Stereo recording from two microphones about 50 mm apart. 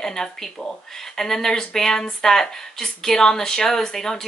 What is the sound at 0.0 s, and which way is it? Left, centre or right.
Speech, centre.